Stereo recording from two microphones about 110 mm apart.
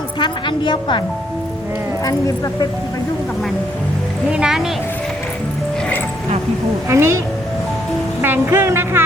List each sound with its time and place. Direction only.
0.2 s a woman's voice: 45° left (ahead or behind)
2.0 s speech: 35° left (ahead or behind)
4.3 s speech: 10° right (ahead or behind)
6.8 s music: 25° right (ahead or behind)
8.2 s music: 20° right (ahead or behind)